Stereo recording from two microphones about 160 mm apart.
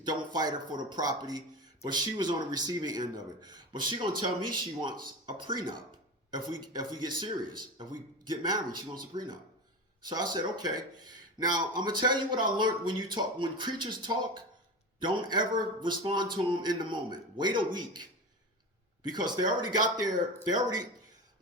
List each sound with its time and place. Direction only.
0.0 s speech: 25° right (ahead or behind)
19.0 s speech: 25° right (ahead or behind)